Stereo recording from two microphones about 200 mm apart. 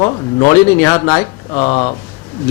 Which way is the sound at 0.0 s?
25° left (ahead or behind).